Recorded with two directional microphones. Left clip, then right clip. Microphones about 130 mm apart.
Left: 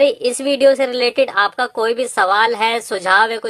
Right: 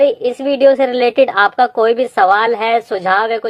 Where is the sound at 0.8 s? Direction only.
5° left (ahead or behind).